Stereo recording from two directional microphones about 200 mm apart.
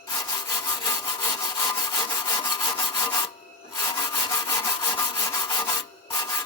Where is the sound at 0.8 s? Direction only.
20° left (ahead or behind).